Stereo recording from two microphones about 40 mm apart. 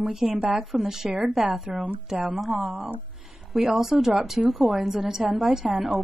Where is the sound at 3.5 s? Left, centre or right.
Centre.